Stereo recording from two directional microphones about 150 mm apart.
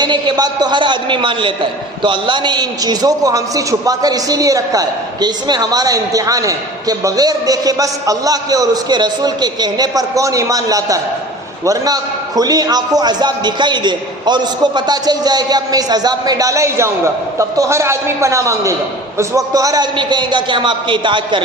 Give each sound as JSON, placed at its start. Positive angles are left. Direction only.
{"t": 0.0, "sound": "a man's voice", "side_deg": -30}